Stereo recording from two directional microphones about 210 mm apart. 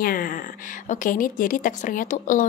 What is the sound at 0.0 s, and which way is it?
Speech, 40° left (ahead or behind).